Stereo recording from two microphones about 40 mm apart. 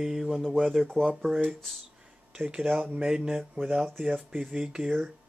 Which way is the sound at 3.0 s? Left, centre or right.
Right.